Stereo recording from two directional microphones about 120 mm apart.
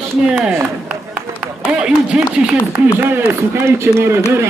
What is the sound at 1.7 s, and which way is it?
A man's voice, 10° right (ahead or behind).